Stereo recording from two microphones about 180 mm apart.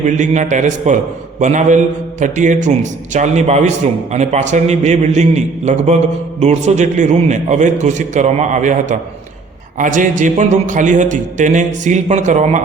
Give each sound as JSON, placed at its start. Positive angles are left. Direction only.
{"t": 0.0, "sound": "a man's voice", "side_deg": -40}